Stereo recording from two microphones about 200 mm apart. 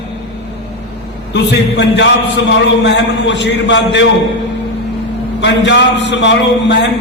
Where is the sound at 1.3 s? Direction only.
60° left (ahead or behind).